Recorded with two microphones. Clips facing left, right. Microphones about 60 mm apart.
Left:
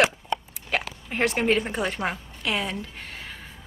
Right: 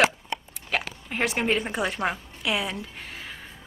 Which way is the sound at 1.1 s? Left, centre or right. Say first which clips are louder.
Left 3 dB; centre.